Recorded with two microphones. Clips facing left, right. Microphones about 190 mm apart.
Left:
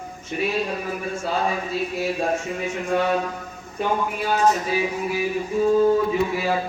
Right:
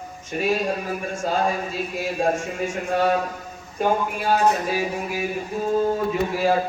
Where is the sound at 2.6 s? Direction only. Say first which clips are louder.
Right 2 dB; 45° right (ahead or behind).